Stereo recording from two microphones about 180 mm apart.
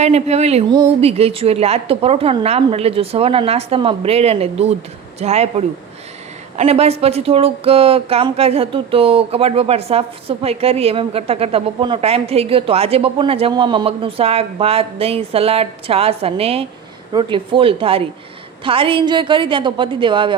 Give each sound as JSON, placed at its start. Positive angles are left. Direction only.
{"t": 0.0, "sound": "a woman's voice", "side_deg": -35}